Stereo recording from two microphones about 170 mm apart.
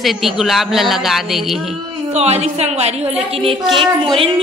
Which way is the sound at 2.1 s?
40° right (ahead or behind).